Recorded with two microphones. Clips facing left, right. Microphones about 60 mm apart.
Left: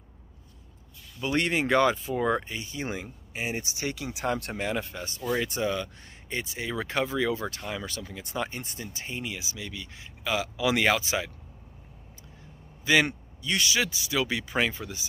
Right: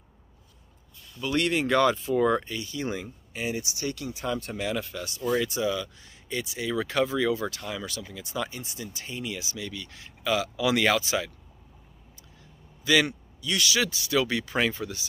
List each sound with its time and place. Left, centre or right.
1.2 s speech: left
4.3 s speech: left
4.6 s speech: left
12.8 s speech: left